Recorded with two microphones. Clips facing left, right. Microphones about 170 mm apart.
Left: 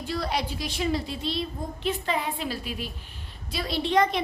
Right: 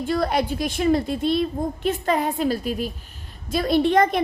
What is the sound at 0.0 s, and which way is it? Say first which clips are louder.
A child's voice: right 7 dB; 50° right (ahead or behind).